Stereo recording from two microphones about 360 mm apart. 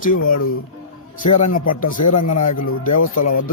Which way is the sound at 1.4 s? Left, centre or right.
Left.